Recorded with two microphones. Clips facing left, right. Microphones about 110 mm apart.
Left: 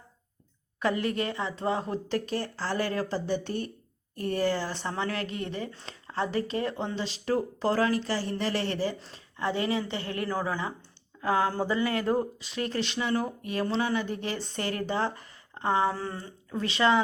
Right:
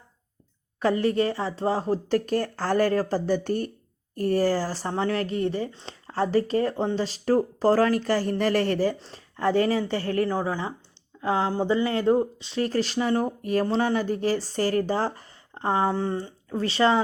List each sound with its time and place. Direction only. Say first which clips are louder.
0.8 s speech: right 6 dB; 35° right (ahead or behind)
9.0 s speech: right 4 dB; 35° right (ahead or behind)
10.2 s speech: right 3 dB; 25° right (ahead or behind)